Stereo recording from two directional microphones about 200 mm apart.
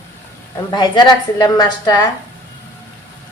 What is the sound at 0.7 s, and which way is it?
A woman's voice, 20° left (ahead or behind).